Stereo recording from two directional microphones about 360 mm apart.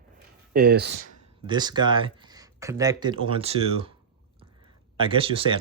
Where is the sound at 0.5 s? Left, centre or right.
Right.